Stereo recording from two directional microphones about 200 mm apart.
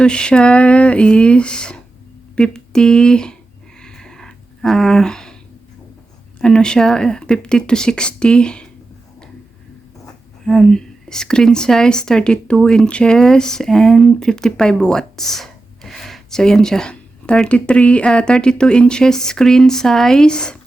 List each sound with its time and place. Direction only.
0.0 s a woman's voice: 5° left (ahead or behind)
3.8 s a sound: 5° left (ahead or behind)
6.4 s a woman's voice: 5° left (ahead or behind)
10.4 s a woman's voice: centre (ahead or behind)